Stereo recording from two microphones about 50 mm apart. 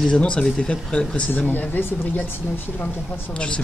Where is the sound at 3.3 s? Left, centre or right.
Left.